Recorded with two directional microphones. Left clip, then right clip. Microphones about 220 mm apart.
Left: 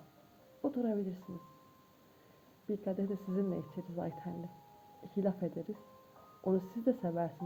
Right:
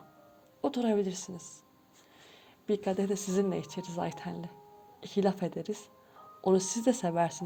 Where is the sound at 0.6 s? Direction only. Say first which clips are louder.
Right 6 dB; 30° right (ahead or behind).